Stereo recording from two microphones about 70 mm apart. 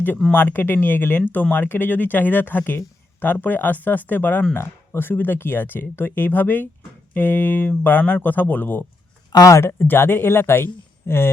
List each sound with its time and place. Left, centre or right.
0.3 s speech: left
9.3 s speech: left
9.7 s speech: left